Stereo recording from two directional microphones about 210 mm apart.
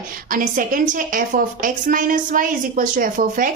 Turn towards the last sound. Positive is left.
turn(degrees=-40)  # may be behind; listen again after turning